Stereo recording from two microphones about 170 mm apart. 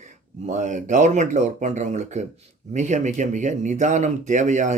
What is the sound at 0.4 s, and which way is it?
Speech, 45° right (ahead or behind).